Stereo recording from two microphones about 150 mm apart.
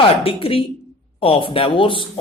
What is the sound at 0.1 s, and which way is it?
Speech, 40° left (ahead or behind).